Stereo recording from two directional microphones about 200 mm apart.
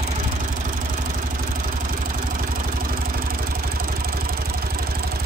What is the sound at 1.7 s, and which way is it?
Vehicle, 45° right (ahead or behind).